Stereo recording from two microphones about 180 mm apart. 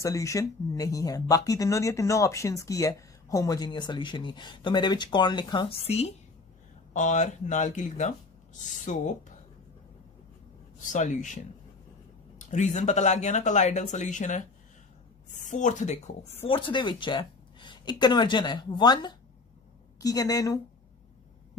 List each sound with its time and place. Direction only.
0.0 s speech: 15° left (ahead or behind); by 9.1 s 45° left (ahead or behind)
10.8 s speech: 45° left (ahead or behind)
16.4 s speech: 30° left (ahead or behind)